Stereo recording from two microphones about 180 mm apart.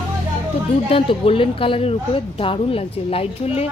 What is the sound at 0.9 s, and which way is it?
A woman's voice, 30° left (ahead or behind).